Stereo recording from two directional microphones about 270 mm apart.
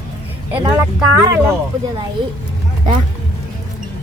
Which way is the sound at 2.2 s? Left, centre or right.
Centre.